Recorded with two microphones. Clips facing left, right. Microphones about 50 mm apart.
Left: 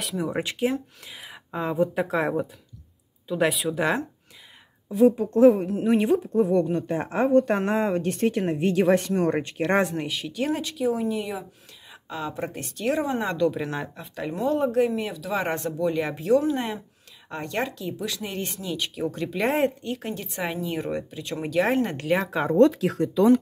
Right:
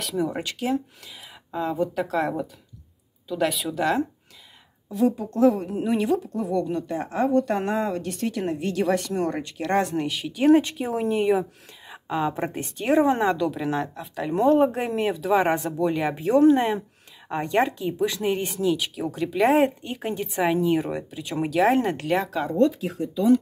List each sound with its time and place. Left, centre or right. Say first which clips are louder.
0.0 s speech: right 3 dB; centre
0.3 s speech: left 1 dB; centre
5.0 s speech: left 4 dB; left
9.8 s speech: right 3 dB; centre
10.4 s speech: right 7 dB; right
11.9 s a woman's voice: right 7 dB; centre
13.2 s speech: right 1 dB; centre
14.3 s a woman's voice: right 4 dB; right
15.3 s speech: right 4 dB; centre
17.3 s a woman's voice: right 6 dB; centre
18.4 s speech: right 6 dB; centre
19.8 s speech: right 2 dB; centre
22.6 s speech: left 4 dB; left